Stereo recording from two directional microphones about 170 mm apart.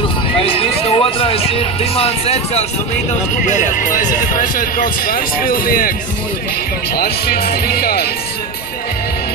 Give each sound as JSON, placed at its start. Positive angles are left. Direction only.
{"t": 0.4, "sound": "speech", "side_deg": 35}
{"t": 3.4, "sound": "speech", "side_deg": 45}
{"t": 7.0, "sound": "speech", "side_deg": 65}